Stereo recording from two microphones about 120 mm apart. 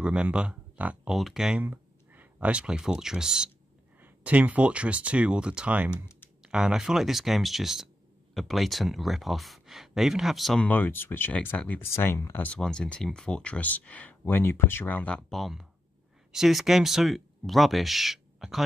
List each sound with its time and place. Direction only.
0.0 s speech: 10° right (ahead or behind)
10.7 s speech: 15° left (ahead or behind)
12.5 s speech: 5° left (ahead or behind)